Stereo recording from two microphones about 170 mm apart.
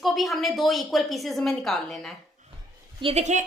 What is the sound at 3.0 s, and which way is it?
Speech, 35° right (ahead or behind).